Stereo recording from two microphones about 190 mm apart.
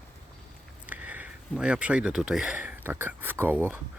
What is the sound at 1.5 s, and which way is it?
Speech, 5° right (ahead or behind).